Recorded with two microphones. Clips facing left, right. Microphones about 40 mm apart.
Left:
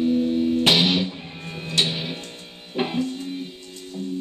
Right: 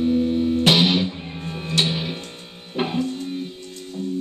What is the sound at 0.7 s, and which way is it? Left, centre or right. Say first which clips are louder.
Music: right 4 dB; centre.